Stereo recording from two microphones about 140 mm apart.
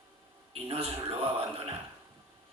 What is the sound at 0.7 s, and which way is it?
Speech, 45° right (ahead or behind).